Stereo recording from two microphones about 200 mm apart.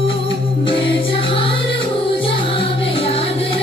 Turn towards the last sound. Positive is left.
turn(degrees=30)  # may be behind; listen again after turning